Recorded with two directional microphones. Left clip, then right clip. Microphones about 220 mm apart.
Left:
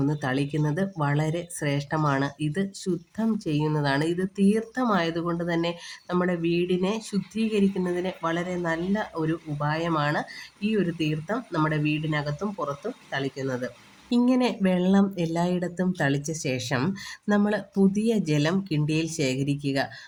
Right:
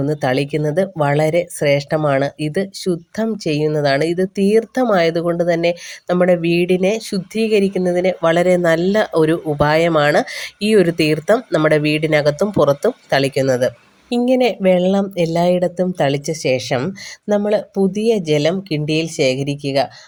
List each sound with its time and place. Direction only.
0.0 s speech: 30° right (ahead or behind)